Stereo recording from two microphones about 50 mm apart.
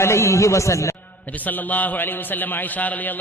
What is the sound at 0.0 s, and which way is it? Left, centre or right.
Speech, left.